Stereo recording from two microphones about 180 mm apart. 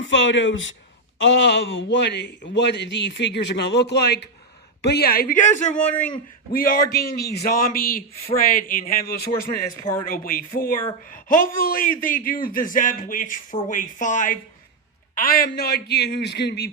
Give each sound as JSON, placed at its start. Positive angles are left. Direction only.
{"t": 0.0, "sound": "a man's voice", "side_deg": 90}